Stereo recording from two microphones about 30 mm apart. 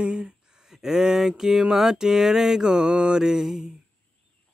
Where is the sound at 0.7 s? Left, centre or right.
Centre.